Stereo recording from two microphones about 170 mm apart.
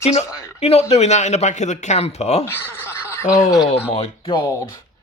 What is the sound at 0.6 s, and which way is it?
Speech, 35° left (ahead or behind).